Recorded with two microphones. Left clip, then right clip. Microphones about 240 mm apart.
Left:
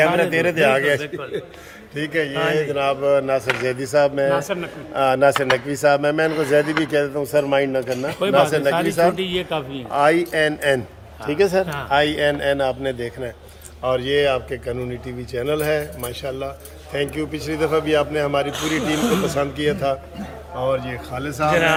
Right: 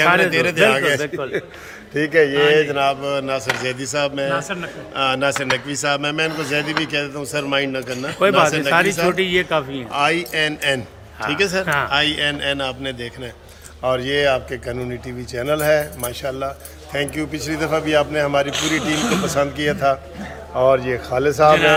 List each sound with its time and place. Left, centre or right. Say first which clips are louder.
0.2 s a man's voice: right 2 dB; centre
2.0 s a man's voice: right 7 dB; centre
2.3 s speech: right 6 dB; centre
2.7 s speech: left 1 dB; centre; by 4.3 s left
4.3 s a man's voice: left 2 dB; left
4.9 s speech: left 3 dB; left
9.1 s a man's voice: right 5 dB; centre
9.9 s speech: left 2 dB; left
11.6 s a man's voice: right 7 dB; centre
11.9 s speech: left 1 dB; left
13.8 s a man's voice: right 1 dB; centre
20.7 s a man's voice: right 6 dB; centre